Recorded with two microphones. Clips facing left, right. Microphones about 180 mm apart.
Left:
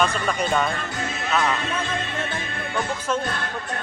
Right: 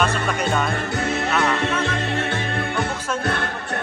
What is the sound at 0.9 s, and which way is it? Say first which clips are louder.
Music: right 4 dB; 65° right (ahead or behind).